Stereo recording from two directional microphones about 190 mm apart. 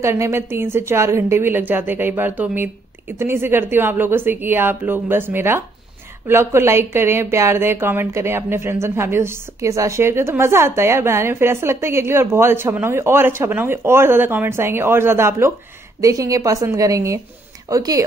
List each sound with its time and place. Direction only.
0.0 s speech: 15° right (ahead or behind)